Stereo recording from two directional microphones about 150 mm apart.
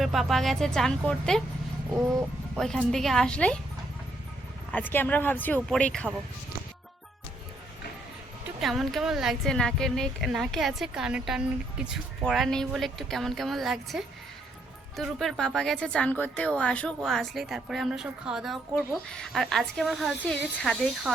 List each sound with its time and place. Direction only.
0.0 s speech: centre (ahead or behind)
1.9 s music: 20° right (ahead or behind)
2.6 s speech: 5° left (ahead or behind)
4.7 s speech: 10° left (ahead or behind)
8.6 s speech: centre (ahead or behind)